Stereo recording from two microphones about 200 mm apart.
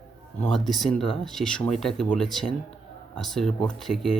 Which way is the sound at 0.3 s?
5° left (ahead or behind).